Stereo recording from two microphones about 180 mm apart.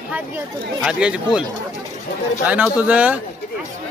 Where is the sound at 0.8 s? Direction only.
5° right (ahead or behind).